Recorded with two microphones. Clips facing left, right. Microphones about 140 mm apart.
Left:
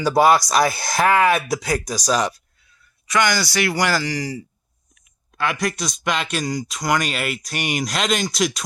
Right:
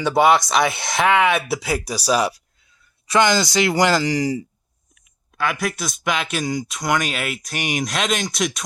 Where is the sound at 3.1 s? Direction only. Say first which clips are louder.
Right 3 dB; 25° right (ahead or behind).